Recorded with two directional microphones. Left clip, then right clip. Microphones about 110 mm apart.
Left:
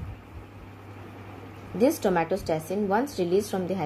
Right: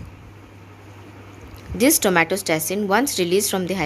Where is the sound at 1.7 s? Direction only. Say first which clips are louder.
Right 6 dB; 25° right (ahead or behind).